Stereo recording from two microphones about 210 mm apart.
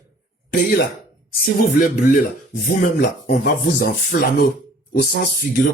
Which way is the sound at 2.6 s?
45° left (ahead or behind).